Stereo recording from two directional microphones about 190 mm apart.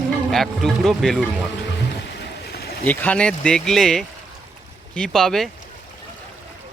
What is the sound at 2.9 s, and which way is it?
Speech, 10° left (ahead or behind).